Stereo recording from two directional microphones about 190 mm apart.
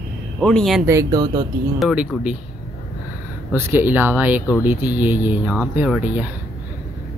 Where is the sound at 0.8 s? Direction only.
15° right (ahead or behind).